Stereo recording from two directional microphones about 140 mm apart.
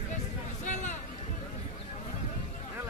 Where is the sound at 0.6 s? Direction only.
60° left (ahead or behind).